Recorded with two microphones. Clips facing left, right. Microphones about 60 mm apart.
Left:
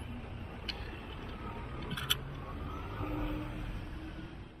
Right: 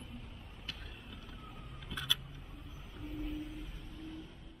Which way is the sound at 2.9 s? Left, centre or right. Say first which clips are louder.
Left 3 dB; left.